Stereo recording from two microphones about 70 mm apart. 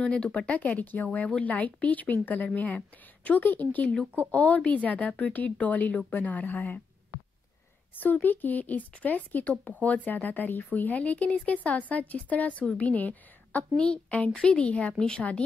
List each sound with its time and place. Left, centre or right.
0.0 s speech: centre
7.9 s a woman's voice: left